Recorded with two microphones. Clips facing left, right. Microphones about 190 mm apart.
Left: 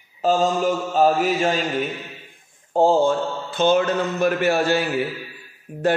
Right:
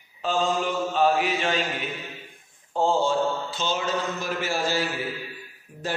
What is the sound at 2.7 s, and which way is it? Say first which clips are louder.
A man's voice: left 6 dB; 45° left (ahead or behind).